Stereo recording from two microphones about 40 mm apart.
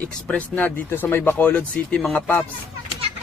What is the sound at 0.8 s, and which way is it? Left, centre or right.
Speech, left.